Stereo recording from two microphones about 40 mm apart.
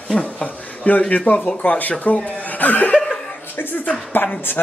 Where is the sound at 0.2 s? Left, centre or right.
Left.